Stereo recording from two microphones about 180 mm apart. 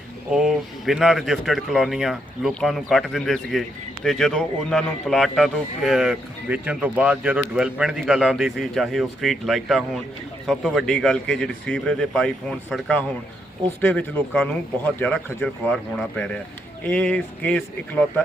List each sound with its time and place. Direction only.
0.3 s speech: centre (ahead or behind)